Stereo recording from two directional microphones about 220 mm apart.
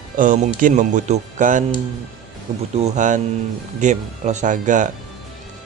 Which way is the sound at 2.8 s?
35° right (ahead or behind).